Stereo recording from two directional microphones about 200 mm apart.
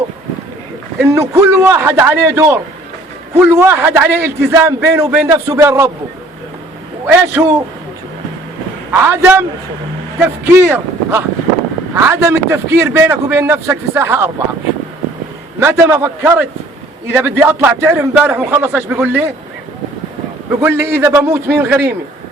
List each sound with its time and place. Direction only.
0.9 s a man's voice: 15° right (ahead or behind)
7.4 s a man's voice: 10° right (ahead or behind)
8.9 s a man's voice: 10° right (ahead or behind)
15.6 s a man's voice: 10° right (ahead or behind)
20.6 s a man's voice: 10° right (ahead or behind)